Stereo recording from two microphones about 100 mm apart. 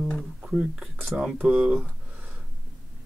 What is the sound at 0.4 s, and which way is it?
Speech, 10° right (ahead or behind).